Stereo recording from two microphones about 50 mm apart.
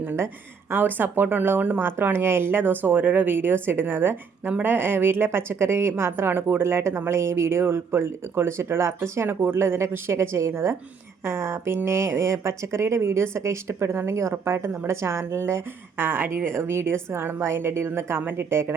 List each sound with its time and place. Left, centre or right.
0.7 s a woman's voice: right
14.4 s a woman's voice: right
16.0 s speech: right
16.3 s a woman's voice: right